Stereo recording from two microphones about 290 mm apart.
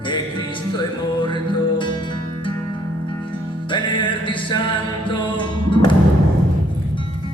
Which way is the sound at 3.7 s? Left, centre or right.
Centre.